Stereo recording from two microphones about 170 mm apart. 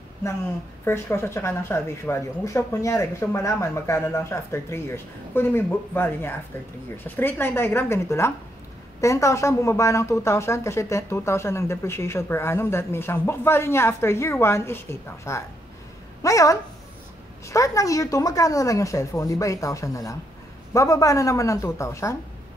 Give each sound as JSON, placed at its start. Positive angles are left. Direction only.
{"t": 0.8, "sound": "a woman's voice", "side_deg": 15}